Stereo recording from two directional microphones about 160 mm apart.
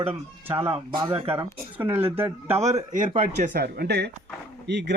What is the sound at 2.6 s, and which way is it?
Speech, 45° right (ahead or behind).